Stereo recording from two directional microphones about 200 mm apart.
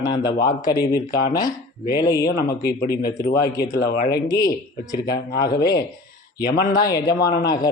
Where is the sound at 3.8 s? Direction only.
50° left (ahead or behind).